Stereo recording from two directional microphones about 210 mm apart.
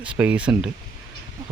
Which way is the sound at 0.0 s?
5° right (ahead or behind).